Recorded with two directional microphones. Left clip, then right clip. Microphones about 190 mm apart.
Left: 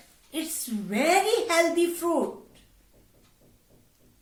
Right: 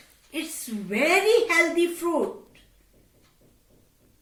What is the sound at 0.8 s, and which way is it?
Speech, 15° left (ahead or behind).